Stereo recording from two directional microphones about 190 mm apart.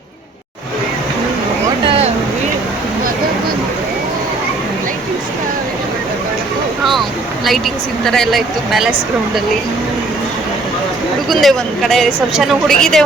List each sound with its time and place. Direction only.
1.9 s vehicle: 35° right (ahead or behind)
7.4 s a woman's voice: centre (ahead or behind)
11.3 s a woman's voice: centre (ahead or behind)